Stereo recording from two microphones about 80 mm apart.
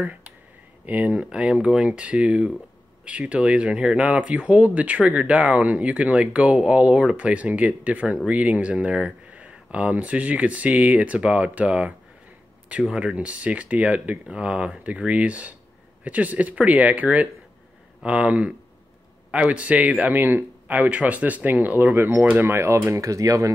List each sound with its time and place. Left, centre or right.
0.0 s a man's voice: right
22.5 s speech: right